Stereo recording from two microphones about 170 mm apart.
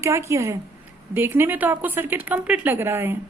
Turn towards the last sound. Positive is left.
turn(degrees=-15)  # may be behind; listen again after turning